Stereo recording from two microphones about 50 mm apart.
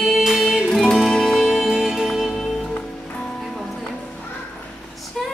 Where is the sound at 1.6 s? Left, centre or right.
Centre.